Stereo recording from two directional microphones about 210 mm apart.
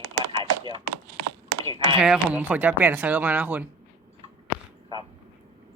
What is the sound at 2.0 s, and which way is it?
Speech, 5° right (ahead or behind).